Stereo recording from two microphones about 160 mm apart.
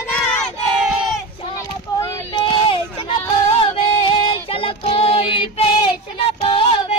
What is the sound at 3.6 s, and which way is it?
Child singing, 30° left (ahead or behind).